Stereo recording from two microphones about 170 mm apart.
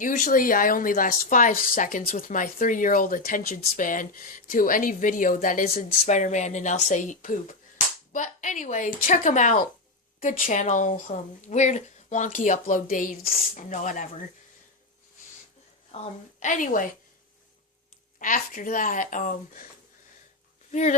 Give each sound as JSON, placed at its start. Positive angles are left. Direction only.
{"t": 0.0, "sound": "speech", "side_deg": 50}
{"t": 16.4, "sound": "speech", "side_deg": 50}
{"t": 18.2, "sound": "speech", "side_deg": 50}
{"t": 20.7, "sound": "speech", "side_deg": 45}